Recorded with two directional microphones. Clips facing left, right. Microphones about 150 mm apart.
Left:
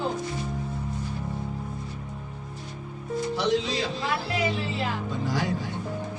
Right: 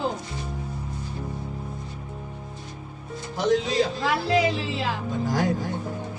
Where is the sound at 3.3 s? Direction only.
45° right (ahead or behind).